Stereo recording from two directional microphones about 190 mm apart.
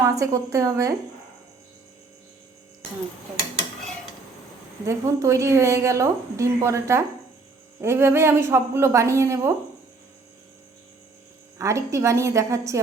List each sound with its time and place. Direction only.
0.0 s a woman's voice: 15° right (ahead or behind)
4.9 s a woman's voice: 15° right (ahead or behind)
11.5 s a woman's voice: 15° right (ahead or behind)